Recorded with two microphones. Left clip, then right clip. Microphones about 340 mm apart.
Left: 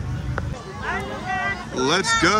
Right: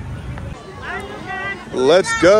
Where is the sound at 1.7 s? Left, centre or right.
Centre.